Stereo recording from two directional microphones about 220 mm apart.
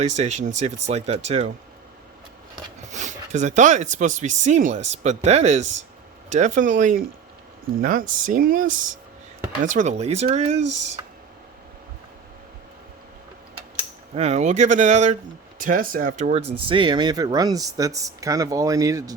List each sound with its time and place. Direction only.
0.0 s speech: 30° right (ahead or behind)
2.9 s speech: 35° right (ahead or behind)
10.6 s speech: 90° right
14.2 s speech: 30° right (ahead or behind)
16.6 s speech: 20° right (ahead or behind)